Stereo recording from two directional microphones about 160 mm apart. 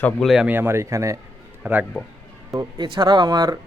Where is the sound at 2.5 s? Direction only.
25° right (ahead or behind).